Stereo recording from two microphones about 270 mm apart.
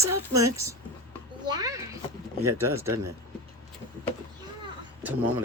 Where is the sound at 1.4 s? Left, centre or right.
Centre.